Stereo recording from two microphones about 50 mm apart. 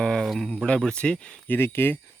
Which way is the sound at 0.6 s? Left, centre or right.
Left.